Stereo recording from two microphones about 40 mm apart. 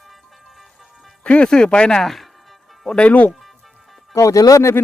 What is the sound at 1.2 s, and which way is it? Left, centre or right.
Music, left.